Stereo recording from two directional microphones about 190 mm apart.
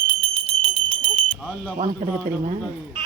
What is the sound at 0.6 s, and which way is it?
Bell, 25° right (ahead or behind).